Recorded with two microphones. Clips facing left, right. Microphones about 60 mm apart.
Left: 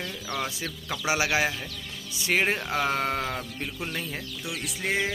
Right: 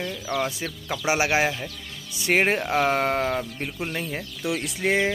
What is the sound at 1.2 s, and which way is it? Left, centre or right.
Speech, right.